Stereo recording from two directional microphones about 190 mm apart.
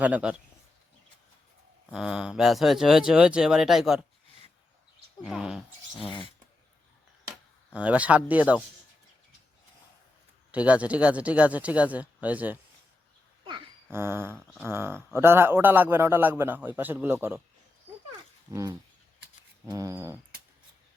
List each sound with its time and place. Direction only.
0.0 s a man's voice: 5° right (ahead or behind)
1.9 s speech: 5° right (ahead or behind)
5.2 s speech: centre (ahead or behind)
6.0 s speech: 25° left (ahead or behind)
7.7 s a man's voice: 5° right (ahead or behind)
10.5 s a man's voice: 5° right (ahead or behind)
13.9 s a man's voice: 10° right (ahead or behind)
14.3 s speech: 5° left (ahead or behind)
14.7 s a man's voice: 10° right (ahead or behind)
18.5 s a man's voice: 20° right (ahead or behind)